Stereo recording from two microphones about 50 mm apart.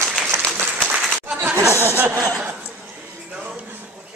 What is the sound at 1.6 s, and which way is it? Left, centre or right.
Speech, right.